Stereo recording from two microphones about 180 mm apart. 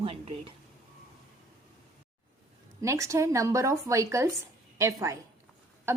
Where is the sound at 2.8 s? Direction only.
15° right (ahead or behind).